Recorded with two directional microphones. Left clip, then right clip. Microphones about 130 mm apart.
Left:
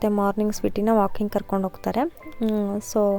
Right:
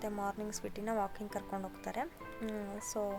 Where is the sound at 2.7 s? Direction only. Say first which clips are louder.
Left 15 dB; 30° left (ahead or behind).